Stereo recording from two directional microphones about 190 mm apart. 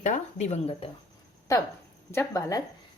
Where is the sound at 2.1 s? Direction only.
15° left (ahead or behind).